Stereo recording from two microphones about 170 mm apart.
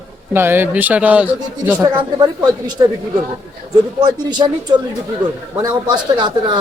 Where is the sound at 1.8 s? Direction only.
25° right (ahead or behind).